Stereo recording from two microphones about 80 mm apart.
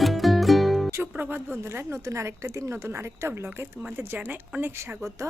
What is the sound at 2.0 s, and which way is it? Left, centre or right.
A woman's voice, right.